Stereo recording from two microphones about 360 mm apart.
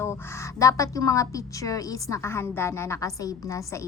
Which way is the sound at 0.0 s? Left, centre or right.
Centre.